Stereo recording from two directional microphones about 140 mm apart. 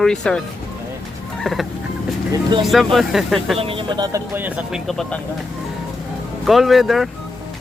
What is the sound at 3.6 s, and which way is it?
Speech, 40° right (ahead or behind).